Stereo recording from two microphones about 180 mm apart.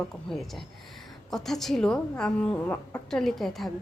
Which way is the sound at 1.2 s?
Centre (ahead or behind).